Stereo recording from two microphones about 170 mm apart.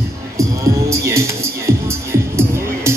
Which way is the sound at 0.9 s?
15° right (ahead or behind).